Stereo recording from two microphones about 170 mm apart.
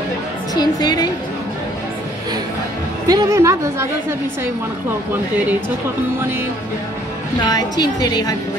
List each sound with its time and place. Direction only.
0.6 s a woman's voice: 25° left (ahead or behind)
3.1 s a woman's voice: 20° right (ahead or behind)
7.4 s a woman's voice: 25° left (ahead or behind)